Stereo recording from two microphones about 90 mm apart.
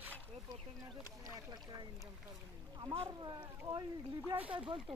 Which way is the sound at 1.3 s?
45° right (ahead or behind).